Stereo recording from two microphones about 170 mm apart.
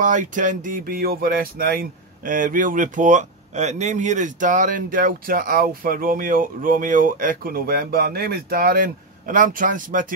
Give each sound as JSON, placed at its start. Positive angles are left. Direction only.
{"t": 0.0, "sound": "speech", "side_deg": -50}